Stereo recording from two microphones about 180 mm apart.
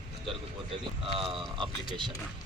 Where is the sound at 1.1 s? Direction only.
30° right (ahead or behind).